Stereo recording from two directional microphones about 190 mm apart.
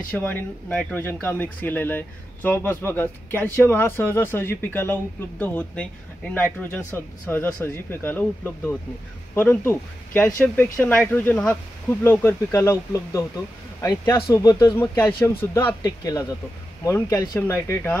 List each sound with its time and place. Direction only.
0.2 s speech: 5° left (ahead or behind)